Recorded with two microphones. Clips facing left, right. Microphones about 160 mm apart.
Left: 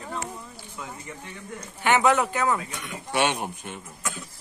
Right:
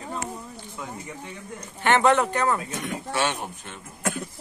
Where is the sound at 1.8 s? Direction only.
10° left (ahead or behind).